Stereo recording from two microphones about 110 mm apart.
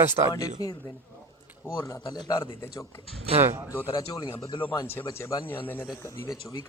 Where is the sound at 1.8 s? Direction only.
40° left (ahead or behind).